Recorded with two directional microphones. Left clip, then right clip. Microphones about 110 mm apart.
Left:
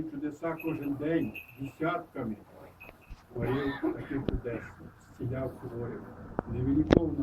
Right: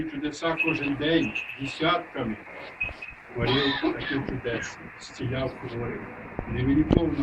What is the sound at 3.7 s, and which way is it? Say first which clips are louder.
Speech: right 6 dB; 30° right (ahead or behind).